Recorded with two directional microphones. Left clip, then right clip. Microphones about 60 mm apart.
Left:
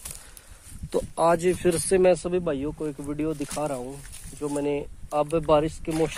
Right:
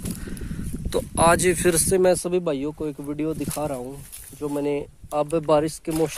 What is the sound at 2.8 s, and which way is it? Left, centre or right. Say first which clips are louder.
Speech: right 2 dB; right.